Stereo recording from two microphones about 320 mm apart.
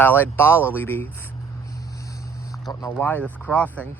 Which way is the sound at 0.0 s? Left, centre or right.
Centre.